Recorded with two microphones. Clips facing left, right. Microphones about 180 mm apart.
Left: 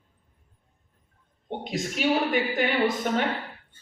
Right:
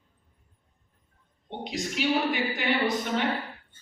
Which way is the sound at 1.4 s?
50° left (ahead or behind).